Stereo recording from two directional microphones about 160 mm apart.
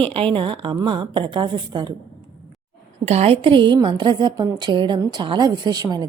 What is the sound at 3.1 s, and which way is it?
A woman's voice, 40° right (ahead or behind).